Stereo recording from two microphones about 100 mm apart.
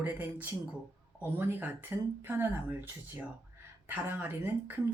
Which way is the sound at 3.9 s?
20° right (ahead or behind).